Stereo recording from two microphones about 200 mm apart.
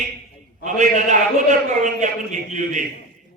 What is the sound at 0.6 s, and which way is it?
A man's voice, 40° right (ahead or behind).